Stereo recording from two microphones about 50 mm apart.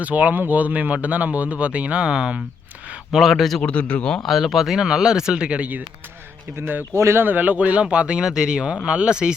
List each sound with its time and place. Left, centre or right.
0.0 s speech: right
3.1 s speech: centre
3.6 s speech: left
4.3 s speech: centre
6.6 s speech: right
6.9 s speech: right
7.2 s speech: right; by 9.3 s centre